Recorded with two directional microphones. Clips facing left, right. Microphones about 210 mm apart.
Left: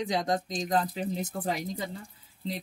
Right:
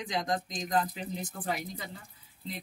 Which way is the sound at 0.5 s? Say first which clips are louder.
Left 2 dB; 25° left (ahead or behind).